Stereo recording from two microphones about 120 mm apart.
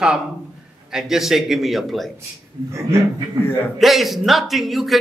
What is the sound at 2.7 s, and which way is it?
Speech, 25° right (ahead or behind).